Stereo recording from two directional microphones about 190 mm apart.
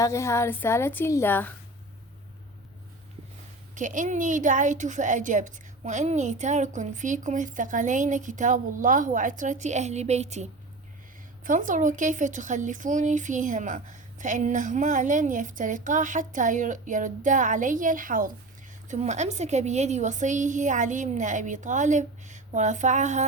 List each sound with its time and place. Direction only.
0.0 s a woman's voice: 15° left (ahead or behind)
3.8 s speech: 40° right (ahead or behind)